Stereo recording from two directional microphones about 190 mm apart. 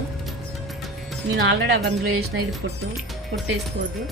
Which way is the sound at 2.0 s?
90° right.